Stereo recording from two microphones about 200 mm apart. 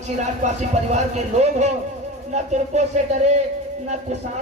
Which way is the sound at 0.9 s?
35° right (ahead or behind).